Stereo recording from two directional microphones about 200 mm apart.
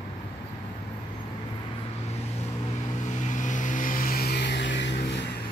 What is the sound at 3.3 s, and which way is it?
Vehicle, 40° left (ahead or behind).